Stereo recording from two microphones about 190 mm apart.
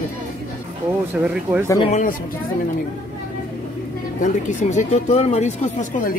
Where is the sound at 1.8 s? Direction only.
40° left (ahead or behind).